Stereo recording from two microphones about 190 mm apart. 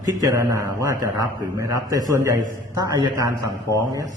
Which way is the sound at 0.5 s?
15° right (ahead or behind).